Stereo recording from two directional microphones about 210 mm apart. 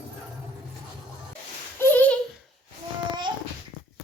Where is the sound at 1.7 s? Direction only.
10° left (ahead or behind).